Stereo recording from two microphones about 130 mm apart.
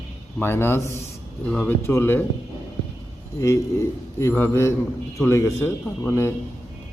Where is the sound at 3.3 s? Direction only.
25° left (ahead or behind).